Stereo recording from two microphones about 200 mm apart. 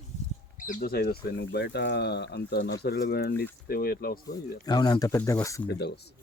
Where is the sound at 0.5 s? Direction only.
40° left (ahead or behind).